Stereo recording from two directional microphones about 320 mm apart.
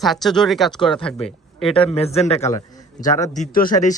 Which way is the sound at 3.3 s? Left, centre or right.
Left.